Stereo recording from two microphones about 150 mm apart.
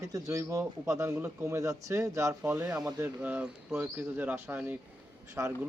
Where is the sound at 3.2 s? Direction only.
10° right (ahead or behind).